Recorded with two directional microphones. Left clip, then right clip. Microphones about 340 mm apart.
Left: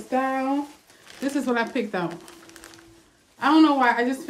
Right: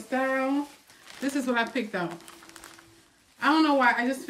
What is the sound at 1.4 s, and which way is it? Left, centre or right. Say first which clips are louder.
Speech: left 2 dB; centre.